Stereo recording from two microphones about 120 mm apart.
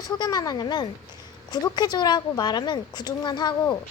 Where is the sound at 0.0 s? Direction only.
30° left (ahead or behind).